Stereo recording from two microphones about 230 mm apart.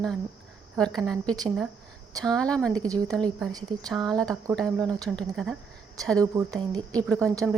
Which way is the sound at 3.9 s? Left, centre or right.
Centre.